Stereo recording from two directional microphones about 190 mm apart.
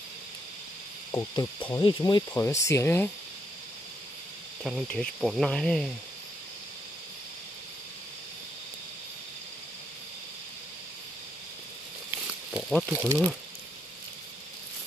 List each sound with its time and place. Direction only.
1.1 s speech: 20° left (ahead or behind)
4.6 s cricket: centre (ahead or behind)
12.8 s speech: 10° right (ahead or behind)